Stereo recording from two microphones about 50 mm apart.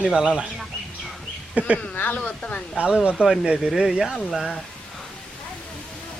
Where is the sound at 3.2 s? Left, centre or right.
Right.